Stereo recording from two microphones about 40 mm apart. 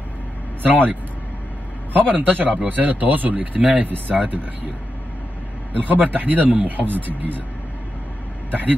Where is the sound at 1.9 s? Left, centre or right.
Right.